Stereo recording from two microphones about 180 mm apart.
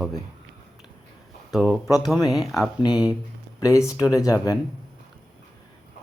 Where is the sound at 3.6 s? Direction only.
15° left (ahead or behind).